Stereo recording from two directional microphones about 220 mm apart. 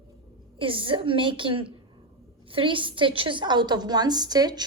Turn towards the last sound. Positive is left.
turn(degrees=-20)  # may be behind; listen again after turning